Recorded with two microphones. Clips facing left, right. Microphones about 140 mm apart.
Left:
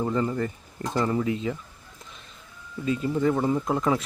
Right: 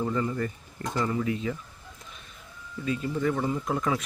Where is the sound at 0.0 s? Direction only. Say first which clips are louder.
Left 3 dB; 25° left (ahead or behind).